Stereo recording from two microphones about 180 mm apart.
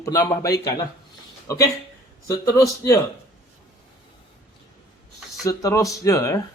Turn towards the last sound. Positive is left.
turn(degrees=15)  # may be behind; listen again after turning